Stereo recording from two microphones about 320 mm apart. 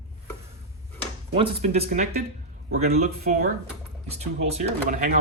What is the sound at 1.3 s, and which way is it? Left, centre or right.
Speech, centre.